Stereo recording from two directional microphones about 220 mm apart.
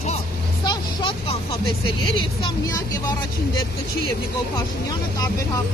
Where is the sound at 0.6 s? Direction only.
20° left (ahead or behind).